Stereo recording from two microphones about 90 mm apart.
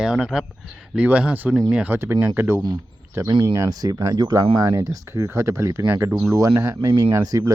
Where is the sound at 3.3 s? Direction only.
45° right (ahead or behind).